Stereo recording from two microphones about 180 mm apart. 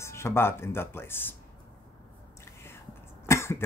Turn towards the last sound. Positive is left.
turn(degrees=15)  # may be behind; listen again after turning